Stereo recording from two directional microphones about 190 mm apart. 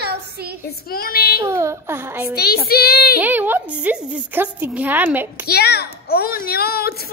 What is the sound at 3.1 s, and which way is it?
A woman's voice, 10° right (ahead or behind).